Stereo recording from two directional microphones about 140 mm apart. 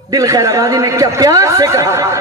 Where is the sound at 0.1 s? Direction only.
25° right (ahead or behind).